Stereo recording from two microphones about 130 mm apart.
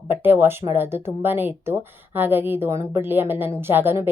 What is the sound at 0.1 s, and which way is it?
A woman's voice, 15° right (ahead or behind).